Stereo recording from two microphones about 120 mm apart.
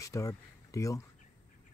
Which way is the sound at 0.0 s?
25° left (ahead or behind).